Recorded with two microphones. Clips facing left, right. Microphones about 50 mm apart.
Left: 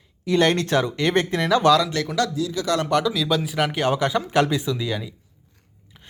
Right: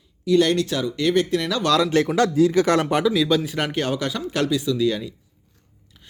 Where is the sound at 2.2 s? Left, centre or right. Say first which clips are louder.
Right 6 dB; right.